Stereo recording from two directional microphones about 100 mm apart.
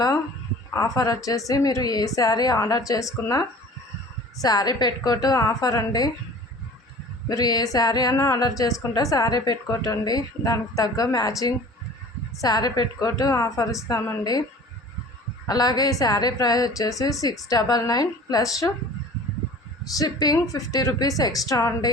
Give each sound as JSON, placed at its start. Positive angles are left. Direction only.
{"t": 0.7, "sound": "a woman's voice", "side_deg": 35}
{"t": 4.4, "sound": "a woman's voice", "side_deg": 40}
{"t": 7.3, "sound": "a woman's voice", "side_deg": 40}
{"t": 15.4, "sound": "a woman's voice", "side_deg": 40}
{"t": 20.0, "sound": "a woman's voice", "side_deg": 40}